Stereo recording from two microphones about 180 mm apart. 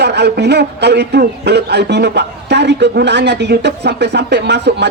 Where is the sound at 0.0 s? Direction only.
70° right (ahead or behind).